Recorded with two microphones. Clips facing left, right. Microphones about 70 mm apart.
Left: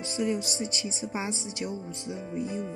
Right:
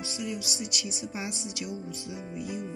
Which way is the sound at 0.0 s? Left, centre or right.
Left.